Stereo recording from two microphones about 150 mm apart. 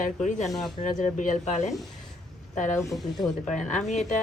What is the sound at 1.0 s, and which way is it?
Speech, 55° left (ahead or behind).